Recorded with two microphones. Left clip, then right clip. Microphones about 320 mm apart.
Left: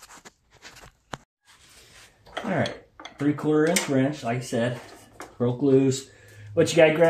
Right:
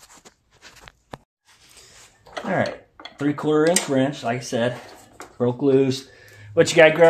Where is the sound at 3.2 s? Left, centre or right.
Right.